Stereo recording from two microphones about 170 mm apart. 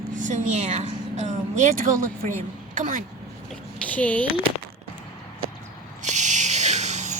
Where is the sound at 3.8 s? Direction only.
10° left (ahead or behind).